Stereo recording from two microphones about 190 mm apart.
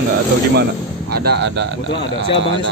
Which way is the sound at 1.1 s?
60° right (ahead or behind).